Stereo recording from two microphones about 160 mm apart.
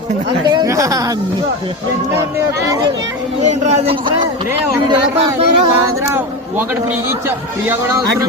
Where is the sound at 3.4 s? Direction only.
45° right (ahead or behind).